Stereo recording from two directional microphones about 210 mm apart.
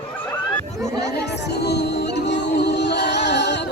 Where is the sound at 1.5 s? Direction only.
50° left (ahead or behind).